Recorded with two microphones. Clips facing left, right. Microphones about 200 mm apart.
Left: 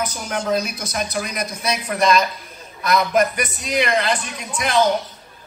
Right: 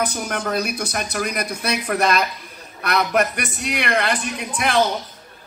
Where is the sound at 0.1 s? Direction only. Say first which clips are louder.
Left 2 dB; 60° right (ahead or behind).